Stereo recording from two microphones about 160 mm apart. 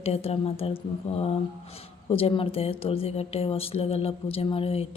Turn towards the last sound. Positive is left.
turn(degrees=35)  # may be behind; listen again after turning